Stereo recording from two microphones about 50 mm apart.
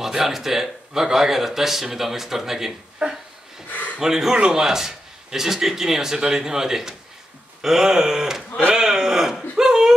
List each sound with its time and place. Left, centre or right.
0.0 s speech: centre
3.7 s gasp: left
4.0 s speech: centre
8.6 s a sound: centre